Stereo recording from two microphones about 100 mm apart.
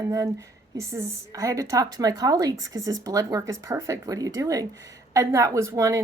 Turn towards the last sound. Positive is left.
turn(degrees=-30)  # may be behind; listen again after turning